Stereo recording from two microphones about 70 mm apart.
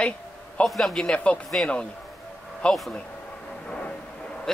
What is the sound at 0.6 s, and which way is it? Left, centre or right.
A man's voice, centre.